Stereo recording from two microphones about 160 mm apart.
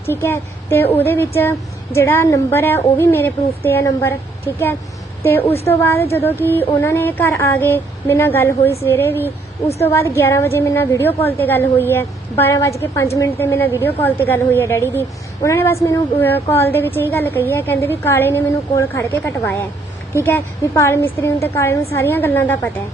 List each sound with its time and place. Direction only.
0.1 s a woman's voice: 15° left (ahead or behind)
5.2 s a woman's voice: 15° left (ahead or behind)